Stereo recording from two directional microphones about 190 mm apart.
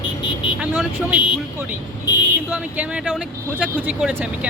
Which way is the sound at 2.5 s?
5° right (ahead or behind).